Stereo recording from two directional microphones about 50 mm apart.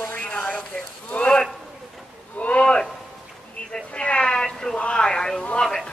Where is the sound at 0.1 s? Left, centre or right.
Left.